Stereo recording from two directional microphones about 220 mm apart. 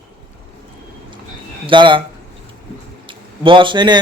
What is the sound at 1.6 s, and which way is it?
Speech, 20° right (ahead or behind).